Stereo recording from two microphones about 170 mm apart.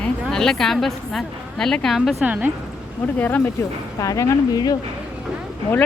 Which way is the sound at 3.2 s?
10° left (ahead or behind).